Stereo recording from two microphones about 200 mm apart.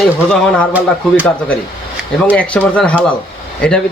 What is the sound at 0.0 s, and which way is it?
Speech, 5° left (ahead or behind).